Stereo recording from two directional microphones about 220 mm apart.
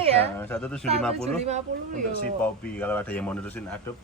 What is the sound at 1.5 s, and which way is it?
Speech, 35° right (ahead or behind).